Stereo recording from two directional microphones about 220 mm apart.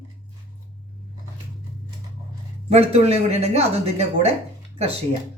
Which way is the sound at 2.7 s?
30° right (ahead or behind).